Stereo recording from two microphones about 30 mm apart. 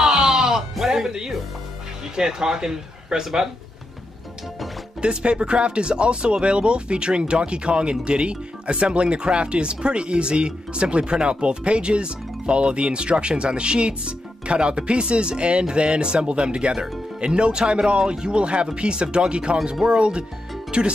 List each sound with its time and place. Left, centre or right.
0.0 s music: centre
2.1 s speech: right
5.0 s speech: right